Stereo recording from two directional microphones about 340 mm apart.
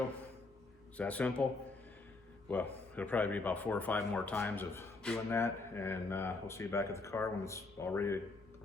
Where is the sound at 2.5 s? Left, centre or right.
Centre.